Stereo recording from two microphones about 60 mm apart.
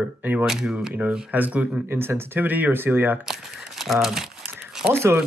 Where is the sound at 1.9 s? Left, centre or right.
Right.